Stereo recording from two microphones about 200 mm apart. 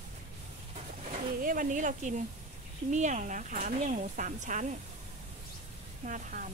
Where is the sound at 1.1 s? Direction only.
45° right (ahead or behind).